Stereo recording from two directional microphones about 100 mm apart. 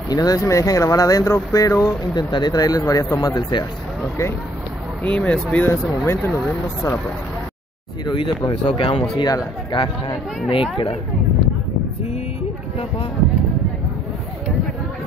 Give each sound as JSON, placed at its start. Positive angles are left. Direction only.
{"t": 0.1, "sound": "speech", "side_deg": 40}
{"t": 3.2, "sound": "speech", "side_deg": 45}
{"t": 5.0, "sound": "speech", "side_deg": 15}
{"t": 5.7, "sound": "speech", "side_deg": 25}
{"t": 8.0, "sound": "speech", "side_deg": 50}